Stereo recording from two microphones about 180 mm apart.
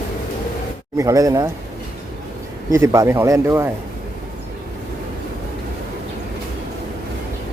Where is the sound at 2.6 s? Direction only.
15° right (ahead or behind).